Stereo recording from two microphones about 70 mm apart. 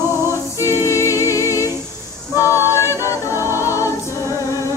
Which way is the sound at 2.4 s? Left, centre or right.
Left.